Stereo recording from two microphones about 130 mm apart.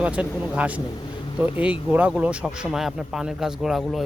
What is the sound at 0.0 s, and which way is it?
Speech, 10° right (ahead or behind).